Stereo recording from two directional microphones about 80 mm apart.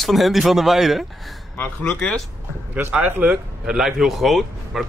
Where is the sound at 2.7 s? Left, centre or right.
Centre.